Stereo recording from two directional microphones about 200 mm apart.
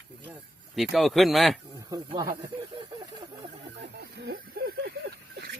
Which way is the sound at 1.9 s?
20° right (ahead or behind).